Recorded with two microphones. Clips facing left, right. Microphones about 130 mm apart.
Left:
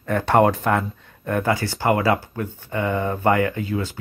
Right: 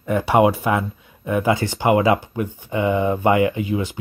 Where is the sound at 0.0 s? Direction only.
10° right (ahead or behind).